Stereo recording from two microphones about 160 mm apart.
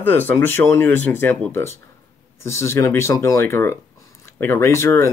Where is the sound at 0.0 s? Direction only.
10° left (ahead or behind).